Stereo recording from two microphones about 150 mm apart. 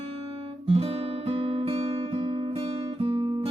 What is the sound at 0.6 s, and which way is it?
Guitar, 40° right (ahead or behind).